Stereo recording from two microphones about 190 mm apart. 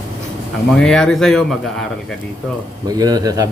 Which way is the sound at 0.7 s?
5° left (ahead or behind).